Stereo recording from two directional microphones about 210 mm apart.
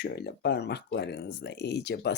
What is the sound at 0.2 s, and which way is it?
Speech, 50° left (ahead or behind).